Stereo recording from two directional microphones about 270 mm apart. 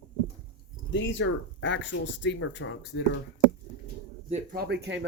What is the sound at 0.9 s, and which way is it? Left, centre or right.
Speech, left.